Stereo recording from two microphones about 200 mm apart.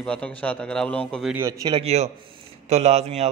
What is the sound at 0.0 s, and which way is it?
A man's voice, 5° left (ahead or behind).